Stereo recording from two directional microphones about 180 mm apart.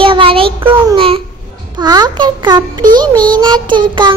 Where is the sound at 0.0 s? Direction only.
30° right (ahead or behind).